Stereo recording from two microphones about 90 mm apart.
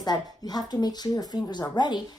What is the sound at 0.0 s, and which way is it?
A woman's voice, 45° left (ahead or behind).